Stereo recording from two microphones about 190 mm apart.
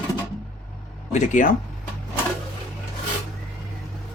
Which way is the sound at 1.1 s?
40° left (ahead or behind).